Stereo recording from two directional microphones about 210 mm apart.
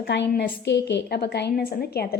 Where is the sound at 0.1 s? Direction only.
55° left (ahead or behind).